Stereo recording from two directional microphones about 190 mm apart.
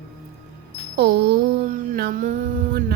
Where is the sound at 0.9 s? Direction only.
60° right (ahead or behind).